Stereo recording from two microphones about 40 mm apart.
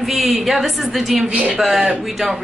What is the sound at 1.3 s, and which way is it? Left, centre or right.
Speech, right.